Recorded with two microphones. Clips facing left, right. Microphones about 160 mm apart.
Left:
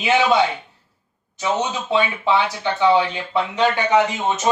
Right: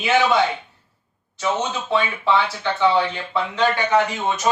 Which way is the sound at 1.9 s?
20° left (ahead or behind).